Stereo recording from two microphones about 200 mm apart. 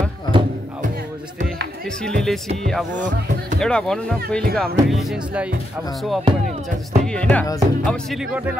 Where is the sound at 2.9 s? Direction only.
40° right (ahead or behind).